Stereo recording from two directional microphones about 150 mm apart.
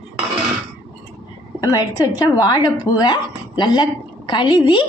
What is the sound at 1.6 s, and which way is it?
A woman's voice, 25° left (ahead or behind).